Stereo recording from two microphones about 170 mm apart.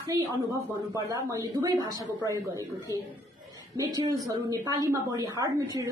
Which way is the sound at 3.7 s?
20° right (ahead or behind).